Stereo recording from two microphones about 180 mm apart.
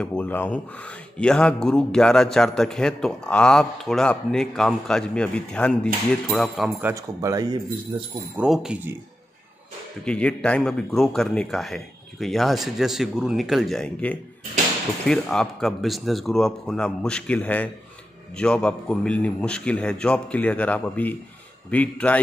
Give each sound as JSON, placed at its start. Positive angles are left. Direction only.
{"t": 0.0, "sound": "a man's voice", "side_deg": 5}
{"t": 6.8, "sound": "speech", "side_deg": -15}
{"t": 8.4, "sound": "a man's voice", "side_deg": -5}
{"t": 10.0, "sound": "a man's voice", "side_deg": 5}